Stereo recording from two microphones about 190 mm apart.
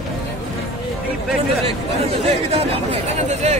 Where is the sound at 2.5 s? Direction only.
30° right (ahead or behind).